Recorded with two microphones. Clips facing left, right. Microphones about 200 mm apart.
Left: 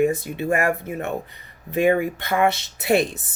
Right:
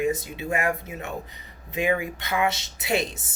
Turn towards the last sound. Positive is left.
turn(degrees=60)  # may be behind; listen again after turning